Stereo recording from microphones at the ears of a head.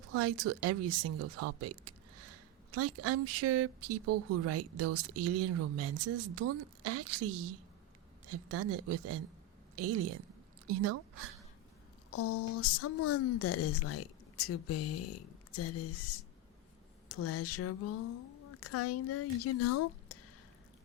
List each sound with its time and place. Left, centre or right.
0.0 s speech: right
12.1 s a woman's voice: left